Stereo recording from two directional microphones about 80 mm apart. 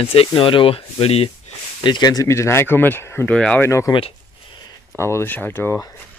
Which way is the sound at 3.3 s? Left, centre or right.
Centre.